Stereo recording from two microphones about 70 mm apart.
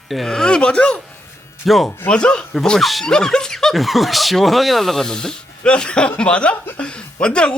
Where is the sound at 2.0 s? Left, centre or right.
Centre.